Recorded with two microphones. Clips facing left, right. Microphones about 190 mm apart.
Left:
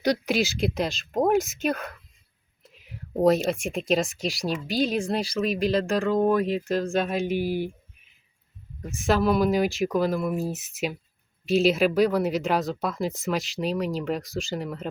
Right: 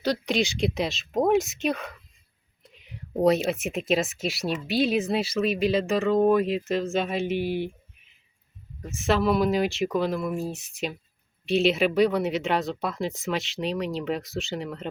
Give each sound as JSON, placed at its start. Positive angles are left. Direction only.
{"t": 0.0, "sound": "speech", "side_deg": 10}
{"t": 8.8, "sound": "speech", "side_deg": 0}